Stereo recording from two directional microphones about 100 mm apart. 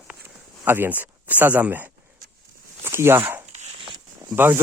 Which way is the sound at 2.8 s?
25° right (ahead or behind).